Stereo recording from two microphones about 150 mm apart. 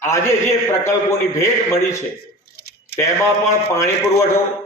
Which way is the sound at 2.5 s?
90° left.